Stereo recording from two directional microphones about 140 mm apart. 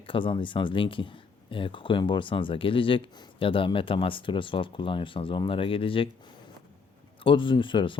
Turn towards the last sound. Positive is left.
turn(degrees=35)  # may be behind; listen again after turning